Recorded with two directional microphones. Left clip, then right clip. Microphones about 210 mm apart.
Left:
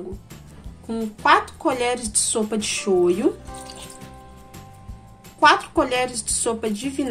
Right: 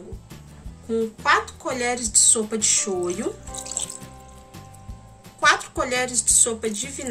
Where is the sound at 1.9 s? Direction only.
20° left (ahead or behind).